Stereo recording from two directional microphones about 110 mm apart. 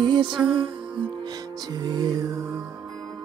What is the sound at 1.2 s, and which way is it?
Music, 40° right (ahead or behind).